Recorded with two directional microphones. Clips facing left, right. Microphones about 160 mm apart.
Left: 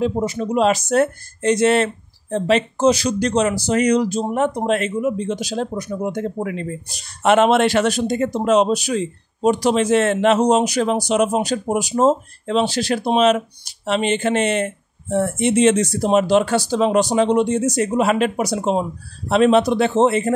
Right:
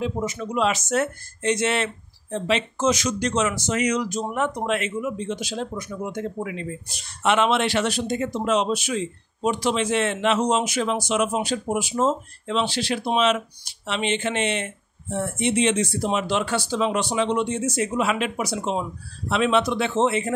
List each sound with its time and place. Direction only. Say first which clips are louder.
0.0 s speech: left 6 dB; 35° left (ahead or behind)